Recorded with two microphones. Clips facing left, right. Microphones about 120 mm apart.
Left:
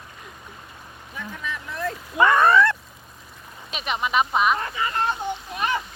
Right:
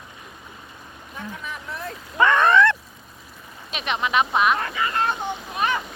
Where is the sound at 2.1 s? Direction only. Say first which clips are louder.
Even; 10° left (ahead or behind).